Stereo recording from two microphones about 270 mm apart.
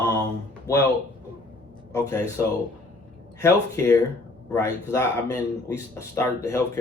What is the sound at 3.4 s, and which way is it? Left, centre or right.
Speech, centre.